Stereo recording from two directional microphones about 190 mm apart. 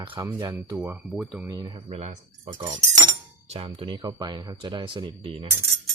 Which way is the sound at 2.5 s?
25° right (ahead or behind).